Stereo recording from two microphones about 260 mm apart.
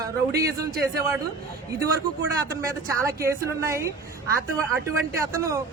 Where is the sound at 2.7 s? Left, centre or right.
Centre.